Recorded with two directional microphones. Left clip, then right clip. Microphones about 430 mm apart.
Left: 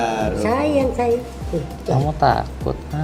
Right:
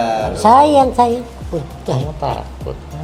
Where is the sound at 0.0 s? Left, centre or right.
Right.